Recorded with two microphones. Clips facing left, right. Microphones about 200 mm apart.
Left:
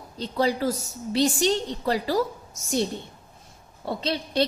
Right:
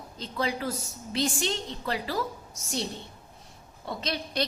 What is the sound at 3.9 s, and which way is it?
Speech, 30° left (ahead or behind).